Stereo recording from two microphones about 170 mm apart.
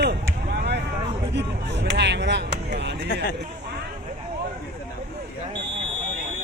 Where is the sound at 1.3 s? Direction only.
90° right.